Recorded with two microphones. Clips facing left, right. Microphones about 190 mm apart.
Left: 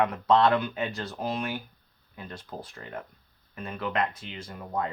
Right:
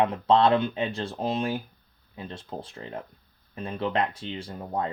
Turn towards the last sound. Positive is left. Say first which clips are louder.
# right 2 dB
turn(degrees=-30)  # may be behind; listen again after turning